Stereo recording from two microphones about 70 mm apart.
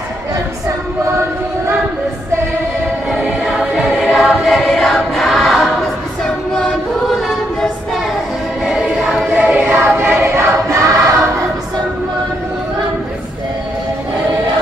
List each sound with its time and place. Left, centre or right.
3.1 s choir: centre
8.6 s choir: centre
9.4 s choir: right